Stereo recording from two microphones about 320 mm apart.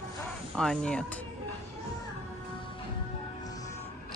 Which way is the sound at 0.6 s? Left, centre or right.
Centre.